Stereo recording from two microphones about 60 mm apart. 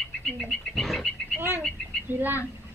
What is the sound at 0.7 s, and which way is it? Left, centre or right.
Speech, centre.